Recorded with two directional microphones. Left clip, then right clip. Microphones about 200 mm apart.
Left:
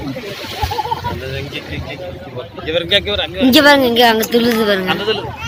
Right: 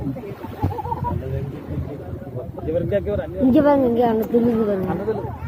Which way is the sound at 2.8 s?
25° left (ahead or behind).